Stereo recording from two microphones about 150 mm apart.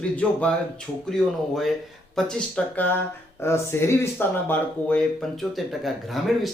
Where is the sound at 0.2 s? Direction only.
10° left (ahead or behind).